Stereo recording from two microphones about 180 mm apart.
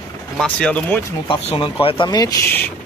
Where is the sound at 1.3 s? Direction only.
30° left (ahead or behind).